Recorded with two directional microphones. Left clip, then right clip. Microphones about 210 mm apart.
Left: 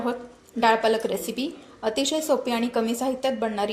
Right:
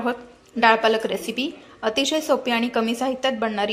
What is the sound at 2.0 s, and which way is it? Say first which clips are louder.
Speech: right 3 dB; 20° right (ahead or behind).